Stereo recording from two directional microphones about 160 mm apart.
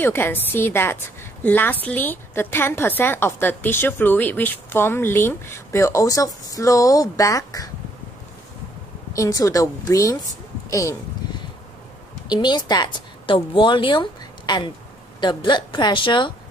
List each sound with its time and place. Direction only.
0.0 s a woman's voice: 15° left (ahead or behind)
9.1 s a woman's voice: 20° left (ahead or behind)
12.3 s a woman's voice: 25° left (ahead or behind)